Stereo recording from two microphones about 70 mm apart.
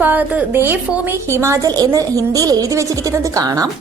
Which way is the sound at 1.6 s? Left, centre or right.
Right.